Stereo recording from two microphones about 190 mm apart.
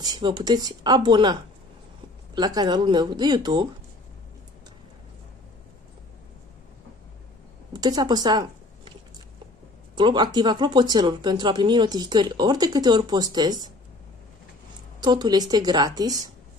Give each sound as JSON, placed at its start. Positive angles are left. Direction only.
{"t": 0.0, "sound": "speech", "side_deg": -25}
{"t": 7.7, "sound": "a woman's voice", "side_deg": -20}
{"t": 9.9, "sound": "speech", "side_deg": -25}
{"t": 15.0, "sound": "speech", "side_deg": -25}